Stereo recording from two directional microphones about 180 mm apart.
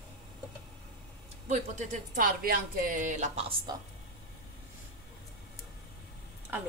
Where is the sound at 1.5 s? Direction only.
45° right (ahead or behind).